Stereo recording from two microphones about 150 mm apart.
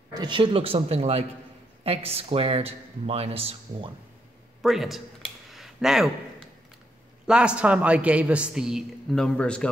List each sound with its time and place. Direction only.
0.1 s speech: 30° right (ahead or behind)
4.6 s a man's voice: centre (ahead or behind)
5.5 s a sound: centre (ahead or behind)
7.2 s a man's voice: 5° right (ahead or behind)